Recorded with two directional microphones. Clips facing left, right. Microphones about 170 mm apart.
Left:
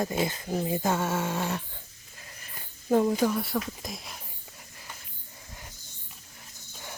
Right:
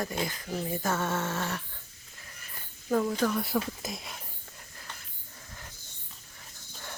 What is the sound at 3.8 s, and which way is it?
Whispering, centre (ahead or behind).